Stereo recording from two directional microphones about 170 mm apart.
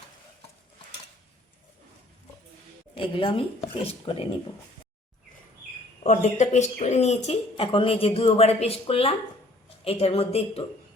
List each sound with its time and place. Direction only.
2.9 s speech: 30° left (ahead or behind)
6.0 s speech: 40° left (ahead or behind)